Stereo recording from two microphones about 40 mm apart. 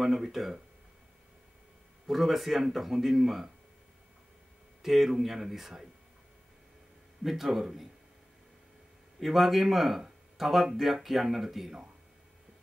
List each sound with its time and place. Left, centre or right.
0.0 s speech: centre
2.0 s speech: centre
4.8 s speech: centre
7.2 s speech: centre
9.2 s speech: centre